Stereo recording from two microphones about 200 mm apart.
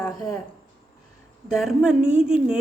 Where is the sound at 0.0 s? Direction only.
15° left (ahead or behind).